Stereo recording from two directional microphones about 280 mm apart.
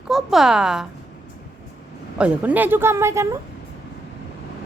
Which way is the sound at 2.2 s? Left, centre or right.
Centre.